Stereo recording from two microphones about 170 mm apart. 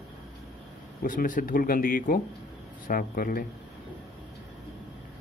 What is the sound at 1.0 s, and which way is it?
A man's voice, 55° left (ahead or behind).